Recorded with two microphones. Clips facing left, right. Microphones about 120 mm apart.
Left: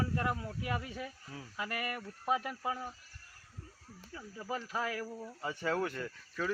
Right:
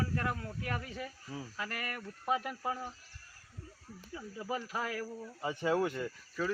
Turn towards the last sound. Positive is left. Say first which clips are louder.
# right 2 dB
turn(degrees=-10)  # may be behind; listen again after turning